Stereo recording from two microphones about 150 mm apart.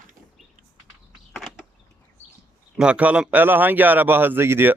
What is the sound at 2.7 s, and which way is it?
A man's voice, 5° right (ahead or behind).